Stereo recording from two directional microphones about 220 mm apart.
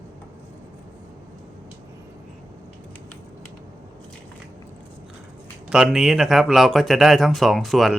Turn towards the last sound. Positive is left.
turn(degrees=0)  # may be behind; listen again after turning